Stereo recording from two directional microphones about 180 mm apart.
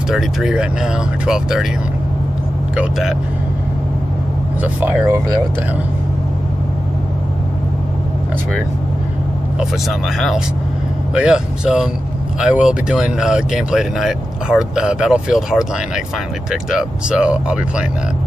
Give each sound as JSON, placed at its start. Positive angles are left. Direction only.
{"t": 0.1, "sound": "speech", "side_deg": -5}
{"t": 2.7, "sound": "speech", "side_deg": -5}
{"t": 4.7, "sound": "speech", "side_deg": -10}
{"t": 9.6, "sound": "speech", "side_deg": 0}
{"t": 16.7, "sound": "speech", "side_deg": -5}